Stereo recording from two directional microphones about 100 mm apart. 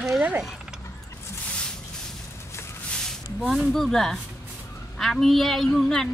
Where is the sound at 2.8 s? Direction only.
5° left (ahead or behind).